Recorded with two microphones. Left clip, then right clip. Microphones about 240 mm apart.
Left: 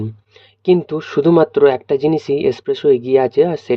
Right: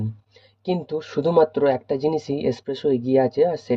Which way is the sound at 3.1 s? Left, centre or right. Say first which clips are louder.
Left 5 dB; left.